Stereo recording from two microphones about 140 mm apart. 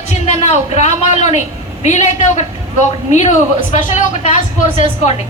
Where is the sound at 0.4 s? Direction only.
55° left (ahead or behind).